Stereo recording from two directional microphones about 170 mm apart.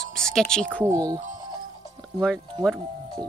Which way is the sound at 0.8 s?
20° right (ahead or behind).